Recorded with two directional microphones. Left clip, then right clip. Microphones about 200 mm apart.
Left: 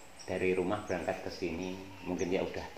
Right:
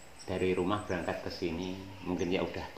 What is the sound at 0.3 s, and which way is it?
Speech, 40° right (ahead or behind).